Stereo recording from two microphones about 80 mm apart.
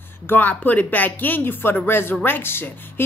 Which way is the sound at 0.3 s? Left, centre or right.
Left.